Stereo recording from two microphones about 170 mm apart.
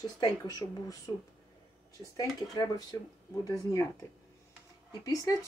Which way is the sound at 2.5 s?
20° left (ahead or behind).